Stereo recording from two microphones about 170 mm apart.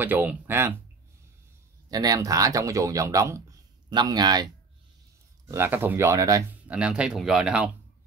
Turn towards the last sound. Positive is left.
turn(degrees=-5)  # may be behind; listen again after turning